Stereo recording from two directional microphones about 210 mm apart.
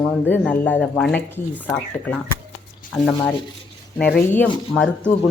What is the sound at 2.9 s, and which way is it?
Speech, 5° left (ahead or behind).